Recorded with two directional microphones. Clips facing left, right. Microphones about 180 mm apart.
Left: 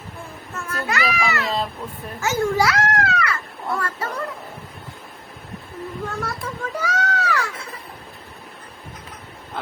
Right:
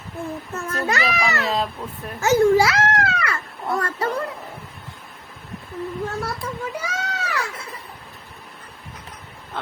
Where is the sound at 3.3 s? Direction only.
30° right (ahead or behind).